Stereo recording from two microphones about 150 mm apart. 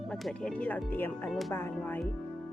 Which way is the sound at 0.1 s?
5° left (ahead or behind).